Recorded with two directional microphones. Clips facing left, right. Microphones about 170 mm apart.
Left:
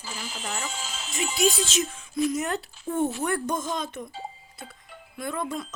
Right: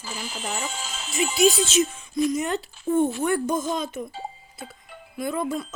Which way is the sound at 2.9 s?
20° right (ahead or behind).